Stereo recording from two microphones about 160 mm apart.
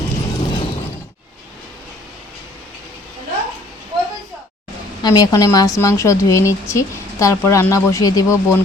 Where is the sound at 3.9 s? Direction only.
25° right (ahead or behind).